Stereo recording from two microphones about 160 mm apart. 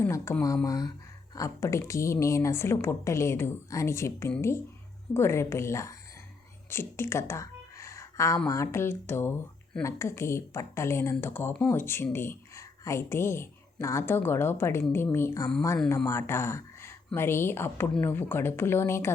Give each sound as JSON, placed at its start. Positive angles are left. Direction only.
{"t": 0.0, "sound": "speech", "side_deg": 15}
{"t": 6.7, "sound": "a sound", "side_deg": 15}
{"t": 8.4, "sound": "speech", "side_deg": 20}